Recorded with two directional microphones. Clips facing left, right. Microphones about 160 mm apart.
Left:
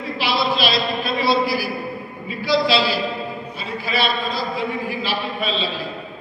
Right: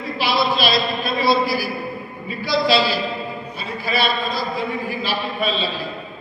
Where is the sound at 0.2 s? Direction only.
45° right (ahead or behind).